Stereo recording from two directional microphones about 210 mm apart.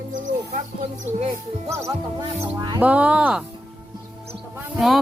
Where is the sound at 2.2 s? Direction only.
20° right (ahead or behind).